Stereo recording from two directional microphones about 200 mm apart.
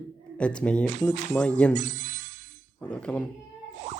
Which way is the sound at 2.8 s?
5° left (ahead or behind).